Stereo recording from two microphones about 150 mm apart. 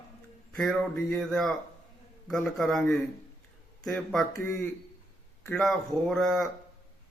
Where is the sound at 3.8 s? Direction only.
Centre (ahead or behind).